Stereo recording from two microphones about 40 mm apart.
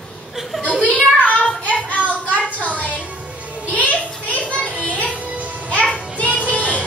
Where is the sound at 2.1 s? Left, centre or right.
Left.